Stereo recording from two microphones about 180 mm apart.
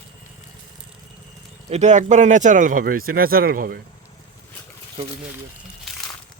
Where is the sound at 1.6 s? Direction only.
40° right (ahead or behind).